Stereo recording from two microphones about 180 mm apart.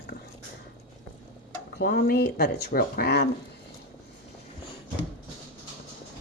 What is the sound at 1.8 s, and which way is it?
Speech, 60° left (ahead or behind).